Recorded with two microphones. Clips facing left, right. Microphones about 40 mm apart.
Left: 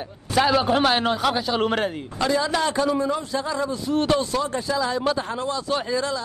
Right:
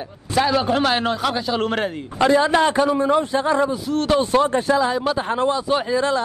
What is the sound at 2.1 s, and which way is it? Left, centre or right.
Speech, right.